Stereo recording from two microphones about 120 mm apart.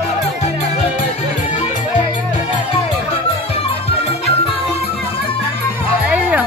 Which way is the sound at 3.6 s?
55° left (ahead or behind).